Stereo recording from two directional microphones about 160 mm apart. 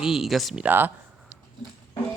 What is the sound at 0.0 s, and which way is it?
Speech, centre (ahead or behind).